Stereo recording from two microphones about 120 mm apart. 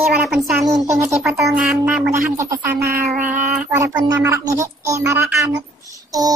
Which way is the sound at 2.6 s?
15° right (ahead or behind).